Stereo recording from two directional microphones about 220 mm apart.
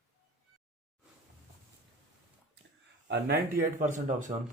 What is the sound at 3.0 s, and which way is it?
Speech, 50° right (ahead or behind).